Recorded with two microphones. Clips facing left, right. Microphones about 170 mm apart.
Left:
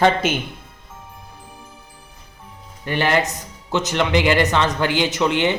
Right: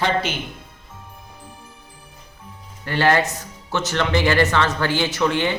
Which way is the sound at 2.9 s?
15° left (ahead or behind).